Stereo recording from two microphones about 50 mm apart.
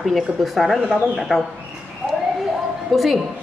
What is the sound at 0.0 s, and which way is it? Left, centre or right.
A woman's voice, centre.